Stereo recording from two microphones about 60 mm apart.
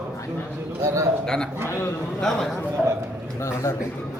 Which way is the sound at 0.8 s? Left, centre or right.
Right.